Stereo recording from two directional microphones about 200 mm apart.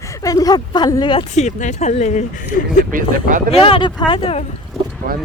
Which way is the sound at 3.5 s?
25° left (ahead or behind).